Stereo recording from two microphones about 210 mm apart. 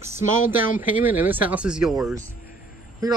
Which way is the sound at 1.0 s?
10° right (ahead or behind).